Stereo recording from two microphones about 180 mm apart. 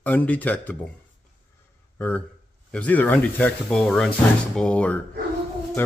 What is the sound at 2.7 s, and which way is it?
A man's voice, 10° left (ahead or behind).